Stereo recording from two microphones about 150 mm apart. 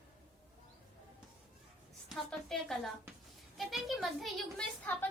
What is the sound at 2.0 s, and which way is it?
A woman's voice, centre (ahead or behind).